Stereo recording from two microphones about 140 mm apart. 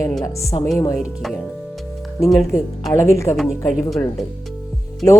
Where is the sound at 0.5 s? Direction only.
35° left (ahead or behind).